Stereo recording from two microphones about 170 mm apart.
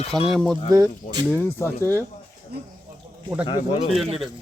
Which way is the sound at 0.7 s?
20° right (ahead or behind).